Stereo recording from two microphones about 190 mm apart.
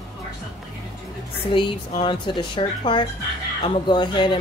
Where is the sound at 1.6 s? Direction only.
25° left (ahead or behind).